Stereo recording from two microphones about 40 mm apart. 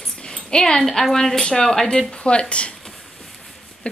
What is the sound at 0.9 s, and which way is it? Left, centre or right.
Speech, centre.